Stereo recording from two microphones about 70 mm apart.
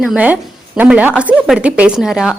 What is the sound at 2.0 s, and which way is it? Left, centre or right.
Speech, centre.